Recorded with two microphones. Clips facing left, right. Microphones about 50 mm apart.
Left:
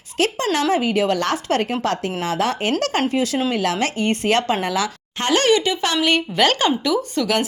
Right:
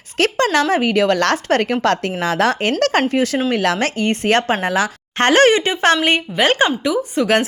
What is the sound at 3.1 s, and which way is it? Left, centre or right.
A woman's voice, right.